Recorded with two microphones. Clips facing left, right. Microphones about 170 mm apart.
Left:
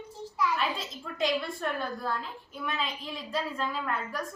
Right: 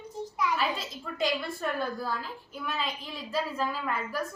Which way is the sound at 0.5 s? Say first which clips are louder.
Right 1 dB; centre (ahead or behind).